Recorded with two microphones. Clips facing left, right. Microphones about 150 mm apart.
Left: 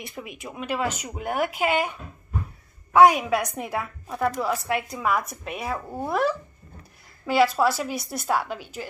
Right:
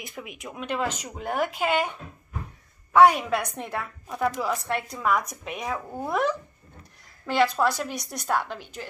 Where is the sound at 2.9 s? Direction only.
10° left (ahead or behind).